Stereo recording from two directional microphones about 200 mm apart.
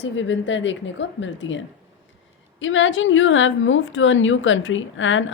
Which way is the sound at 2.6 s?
70° left (ahead or behind).